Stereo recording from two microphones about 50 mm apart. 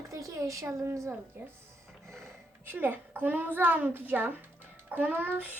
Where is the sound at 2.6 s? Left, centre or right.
Right.